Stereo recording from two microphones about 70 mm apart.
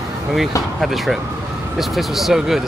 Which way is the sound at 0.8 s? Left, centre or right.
Centre.